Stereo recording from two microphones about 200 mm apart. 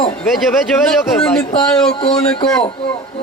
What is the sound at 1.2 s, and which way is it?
Speech, 5° left (ahead or behind).